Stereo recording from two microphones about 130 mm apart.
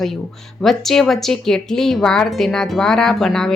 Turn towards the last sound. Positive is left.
turn(degrees=5)  # may be behind; listen again after turning